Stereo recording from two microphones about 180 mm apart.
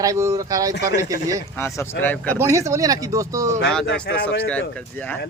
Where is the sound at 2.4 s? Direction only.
15° right (ahead or behind).